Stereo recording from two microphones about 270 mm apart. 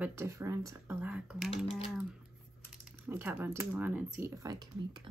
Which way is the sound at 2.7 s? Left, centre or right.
Centre.